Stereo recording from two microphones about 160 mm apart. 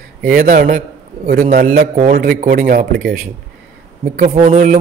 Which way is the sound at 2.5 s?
55° right (ahead or behind).